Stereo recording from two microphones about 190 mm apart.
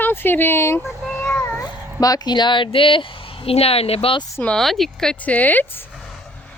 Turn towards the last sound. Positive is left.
turn(degrees=10)  # may be behind; listen again after turning